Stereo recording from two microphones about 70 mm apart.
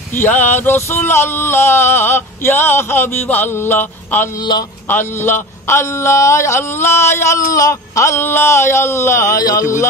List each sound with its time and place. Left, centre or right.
0.1 s a man's voice: left
4.4 s a man's voice: left
4.8 s a man's voice: left
9.4 s speech: left